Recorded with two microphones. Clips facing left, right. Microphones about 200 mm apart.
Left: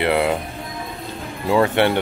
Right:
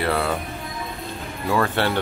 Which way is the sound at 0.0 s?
20° left (ahead or behind).